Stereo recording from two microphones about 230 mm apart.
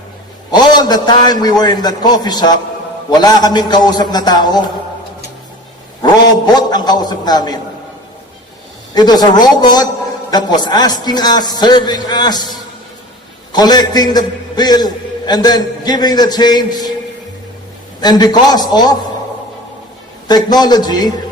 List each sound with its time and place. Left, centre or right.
0.5 s a man's voice: centre
6.0 s a man's voice: centre
9.0 s a man's voice: centre
13.5 s a man's voice: centre
18.0 s a man's voice: centre
20.2 s a man's voice: centre